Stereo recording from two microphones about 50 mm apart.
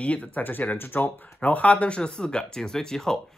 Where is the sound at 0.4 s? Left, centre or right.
Left.